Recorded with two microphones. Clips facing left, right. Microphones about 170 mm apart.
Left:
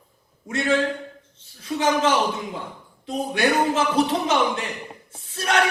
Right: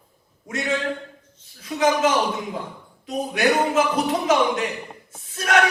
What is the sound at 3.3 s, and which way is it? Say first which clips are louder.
Speech: right 1 dB; 30° left (ahead or behind).